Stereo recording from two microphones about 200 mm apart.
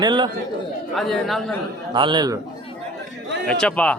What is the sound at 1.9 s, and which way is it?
Speech, 25° right (ahead or behind).